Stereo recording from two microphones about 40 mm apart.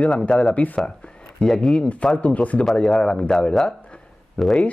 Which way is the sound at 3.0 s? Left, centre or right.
Left.